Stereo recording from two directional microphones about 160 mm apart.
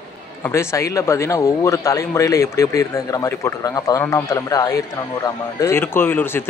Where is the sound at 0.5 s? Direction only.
20° left (ahead or behind).